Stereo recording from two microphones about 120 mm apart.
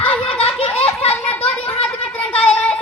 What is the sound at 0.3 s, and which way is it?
Belly laugh, 55° left (ahead or behind).